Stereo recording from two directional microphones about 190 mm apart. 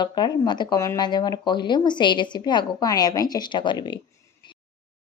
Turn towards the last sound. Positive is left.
turn(degrees=25)  # may be behind; listen again after turning